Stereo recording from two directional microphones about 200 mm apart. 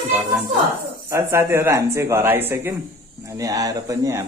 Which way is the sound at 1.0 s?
15° right (ahead or behind).